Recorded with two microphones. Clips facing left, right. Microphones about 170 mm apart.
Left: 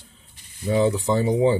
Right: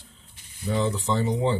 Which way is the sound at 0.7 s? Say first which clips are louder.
Left 5 dB; 10° left (ahead or behind).